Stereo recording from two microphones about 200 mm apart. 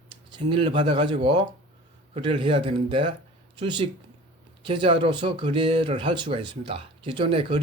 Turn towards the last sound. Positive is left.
turn(degrees=-25)  # may be behind; listen again after turning